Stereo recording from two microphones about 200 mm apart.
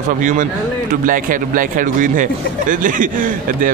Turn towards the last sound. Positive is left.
turn(degrees=-40)  # may be behind; listen again after turning